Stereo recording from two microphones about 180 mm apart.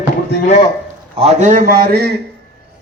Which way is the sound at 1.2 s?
45° right (ahead or behind).